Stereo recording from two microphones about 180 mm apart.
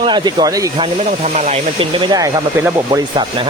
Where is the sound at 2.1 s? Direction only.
15° right (ahead or behind).